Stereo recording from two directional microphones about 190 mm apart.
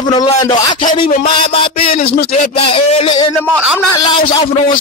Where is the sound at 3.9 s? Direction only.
20° left (ahead or behind).